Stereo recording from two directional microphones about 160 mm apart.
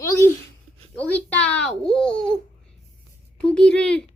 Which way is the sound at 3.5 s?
5° left (ahead or behind).